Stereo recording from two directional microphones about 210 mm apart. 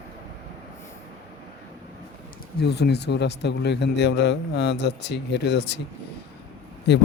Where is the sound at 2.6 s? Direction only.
50° left (ahead or behind).